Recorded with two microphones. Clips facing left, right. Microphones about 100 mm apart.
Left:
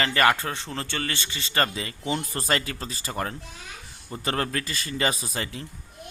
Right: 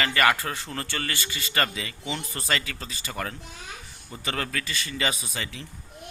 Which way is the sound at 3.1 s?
25° left (ahead or behind).